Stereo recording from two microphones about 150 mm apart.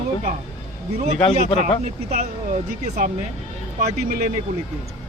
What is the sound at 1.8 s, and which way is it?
Speech, 50° right (ahead or behind).